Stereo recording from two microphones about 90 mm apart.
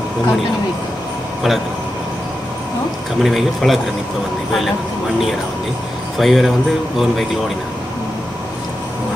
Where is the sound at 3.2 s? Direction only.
Centre (ahead or behind).